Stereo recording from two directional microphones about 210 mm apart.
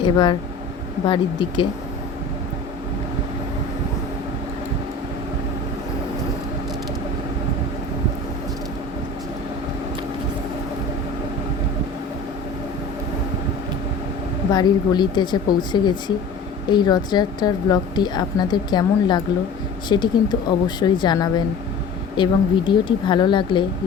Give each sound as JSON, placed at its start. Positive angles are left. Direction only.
{"t": 0.0, "sound": "a woman's voice", "side_deg": 20}
{"t": 14.5, "sound": "a woman's voice", "side_deg": 20}